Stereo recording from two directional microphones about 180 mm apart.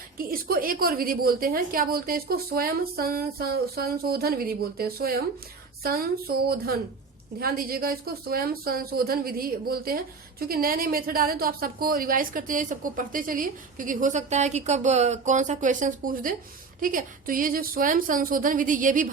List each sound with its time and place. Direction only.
0.2 s a woman's voice: 55° right (ahead or behind)